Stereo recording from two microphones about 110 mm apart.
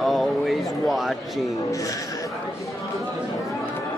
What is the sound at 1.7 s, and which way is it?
Speech, 30° left (ahead or behind).